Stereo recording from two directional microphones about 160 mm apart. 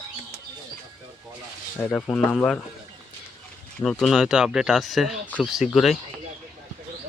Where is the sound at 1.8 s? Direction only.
15° left (ahead or behind).